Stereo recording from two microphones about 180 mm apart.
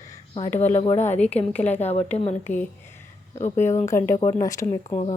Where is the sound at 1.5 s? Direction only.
10° left (ahead or behind).